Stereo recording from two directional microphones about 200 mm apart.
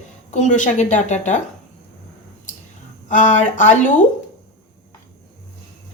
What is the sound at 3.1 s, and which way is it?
Speech, 40° left (ahead or behind).